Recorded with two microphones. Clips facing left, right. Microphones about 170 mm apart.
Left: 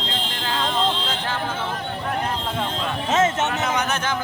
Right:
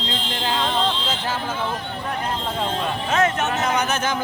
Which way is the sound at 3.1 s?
25° left (ahead or behind).